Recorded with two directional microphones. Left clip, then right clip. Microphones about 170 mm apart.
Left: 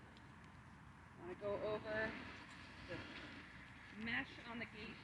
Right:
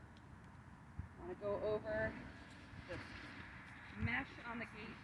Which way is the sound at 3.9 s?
15° left (ahead or behind).